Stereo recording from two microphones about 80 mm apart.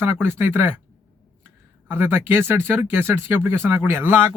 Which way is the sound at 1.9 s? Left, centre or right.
Right.